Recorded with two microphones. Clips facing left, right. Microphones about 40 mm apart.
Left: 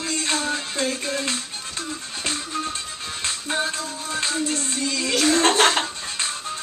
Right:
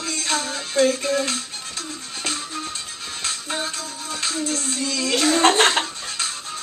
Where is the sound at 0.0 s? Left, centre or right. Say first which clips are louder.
Even; centre.